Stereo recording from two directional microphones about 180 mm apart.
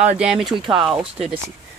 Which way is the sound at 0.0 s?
5° right (ahead or behind).